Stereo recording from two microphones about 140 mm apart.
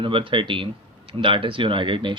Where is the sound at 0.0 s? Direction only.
40° right (ahead or behind).